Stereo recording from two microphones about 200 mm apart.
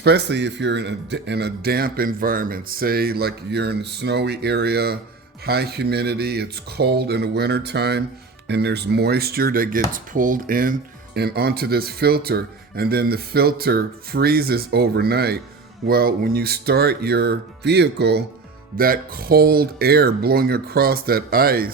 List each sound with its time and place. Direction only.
0.0 s speech: 55° right (ahead or behind)